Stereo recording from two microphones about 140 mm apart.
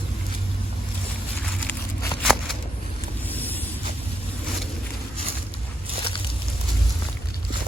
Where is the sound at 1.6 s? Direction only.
10° left (ahead or behind).